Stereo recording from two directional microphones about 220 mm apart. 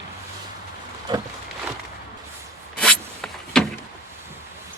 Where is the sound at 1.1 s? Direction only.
20° right (ahead or behind).